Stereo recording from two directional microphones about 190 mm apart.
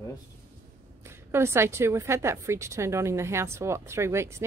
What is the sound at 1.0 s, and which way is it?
A woman's voice, 15° right (ahead or behind).